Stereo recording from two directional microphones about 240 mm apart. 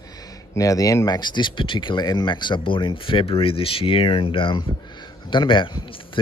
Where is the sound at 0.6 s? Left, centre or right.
Centre.